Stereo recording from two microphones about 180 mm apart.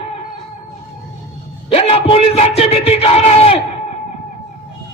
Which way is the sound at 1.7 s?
35° left (ahead or behind).